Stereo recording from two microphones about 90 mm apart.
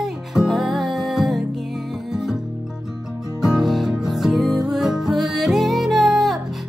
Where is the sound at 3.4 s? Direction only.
5° right (ahead or behind).